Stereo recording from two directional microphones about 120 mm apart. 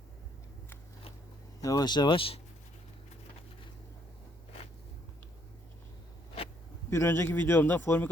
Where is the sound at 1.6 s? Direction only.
30° left (ahead or behind); by 2.4 s 50° left (ahead or behind).